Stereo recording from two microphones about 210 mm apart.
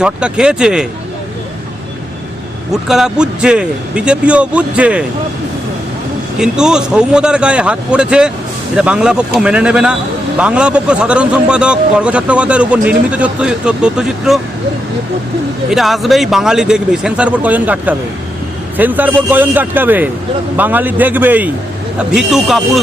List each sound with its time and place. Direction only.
0.0 s speech: 5° right (ahead or behind)
2.8 s speech: centre (ahead or behind)
6.4 s speech: 5° right (ahead or behind)
15.7 s a man's voice: centre (ahead or behind)